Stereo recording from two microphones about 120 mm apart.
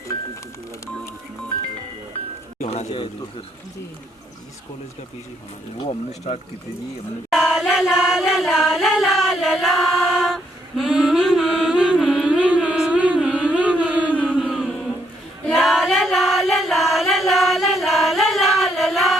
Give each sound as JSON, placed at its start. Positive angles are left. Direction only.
{"t": 2.6, "sound": "music", "side_deg": 60}
{"t": 5.8, "sound": "speech", "side_deg": 55}
{"t": 7.3, "sound": "singing", "side_deg": -5}
{"t": 14.5, "sound": "a sound", "side_deg": 0}
{"t": 15.4, "sound": "singing", "side_deg": -5}